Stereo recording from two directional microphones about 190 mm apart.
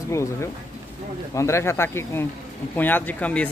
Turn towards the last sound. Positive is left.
turn(degrees=5)  # may be behind; listen again after turning